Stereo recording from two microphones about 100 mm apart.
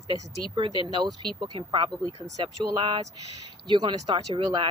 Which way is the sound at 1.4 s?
55° right (ahead or behind).